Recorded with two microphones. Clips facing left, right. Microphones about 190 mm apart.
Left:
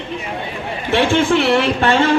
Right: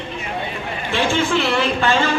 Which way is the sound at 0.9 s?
65° left (ahead or behind).